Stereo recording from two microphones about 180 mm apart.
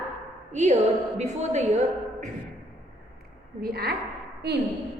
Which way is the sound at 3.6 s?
60° right (ahead or behind).